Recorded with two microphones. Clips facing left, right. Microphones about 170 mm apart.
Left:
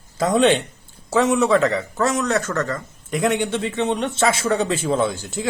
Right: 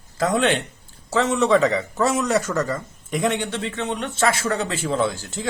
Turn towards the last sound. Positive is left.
turn(degrees=15)  # may be behind; listen again after turning